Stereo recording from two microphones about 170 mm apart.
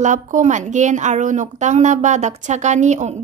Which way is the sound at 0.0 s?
45° right (ahead or behind).